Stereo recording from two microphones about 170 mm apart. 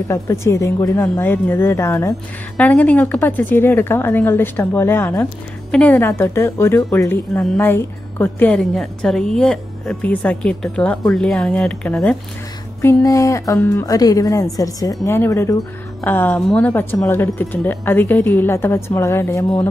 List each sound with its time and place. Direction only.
0.1 s a woman's voice: 15° left (ahead or behind)
12.8 s a woman's voice: 20° left (ahead or behind)